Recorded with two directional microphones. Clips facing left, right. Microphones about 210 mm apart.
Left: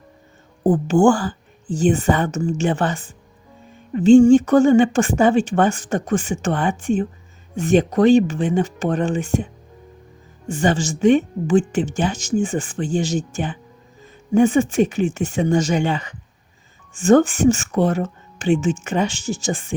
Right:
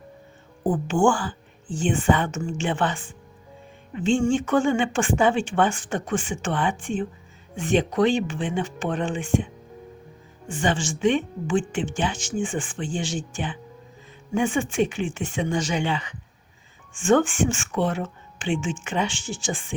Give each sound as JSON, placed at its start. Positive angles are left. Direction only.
{"t": 0.6, "sound": "a woman's voice", "side_deg": 40}
{"t": 10.5, "sound": "a woman's voice", "side_deg": 40}